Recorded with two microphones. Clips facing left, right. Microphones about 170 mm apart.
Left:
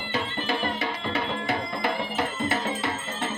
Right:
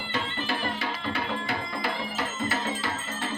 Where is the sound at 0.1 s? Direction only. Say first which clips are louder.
Left 3 dB; 20° left (ahead or behind).